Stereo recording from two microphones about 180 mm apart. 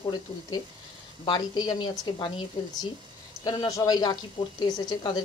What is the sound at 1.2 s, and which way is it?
Speech, 25° left (ahead or behind).